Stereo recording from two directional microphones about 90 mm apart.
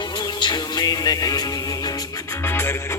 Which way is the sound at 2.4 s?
25° left (ahead or behind).